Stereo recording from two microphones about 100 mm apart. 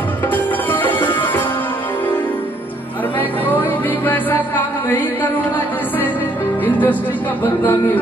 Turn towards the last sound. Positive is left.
turn(degrees=20)  # may be behind; listen again after turning